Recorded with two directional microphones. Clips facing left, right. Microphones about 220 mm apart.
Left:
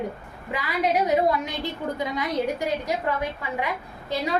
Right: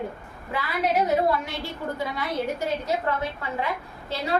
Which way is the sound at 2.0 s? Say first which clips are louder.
Left 3 dB; 15° left (ahead or behind).